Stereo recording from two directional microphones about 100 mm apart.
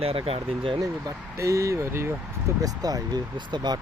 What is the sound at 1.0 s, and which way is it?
Speech, 30° right (ahead or behind).